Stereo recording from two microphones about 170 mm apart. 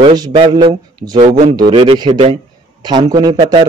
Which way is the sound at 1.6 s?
30° right (ahead or behind).